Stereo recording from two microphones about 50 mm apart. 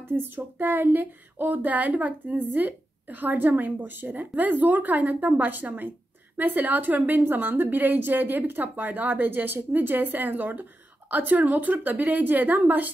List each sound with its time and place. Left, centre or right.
0.1 s a woman's voice: right